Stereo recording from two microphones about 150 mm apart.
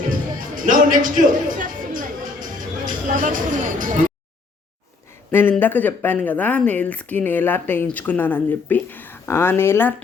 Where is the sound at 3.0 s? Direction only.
60° right (ahead or behind).